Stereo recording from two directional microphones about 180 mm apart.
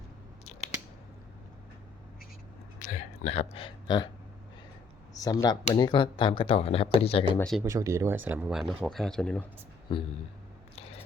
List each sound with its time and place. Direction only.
2.7 s a sound: 40° left (ahead or behind); by 4.1 s 25° left (ahead or behind)
5.1 s speech: 20° left (ahead or behind)
7.6 s speech: 15° right (ahead or behind); by 9.4 s 5° left (ahead or behind)
9.9 s speech: 25° left (ahead or behind)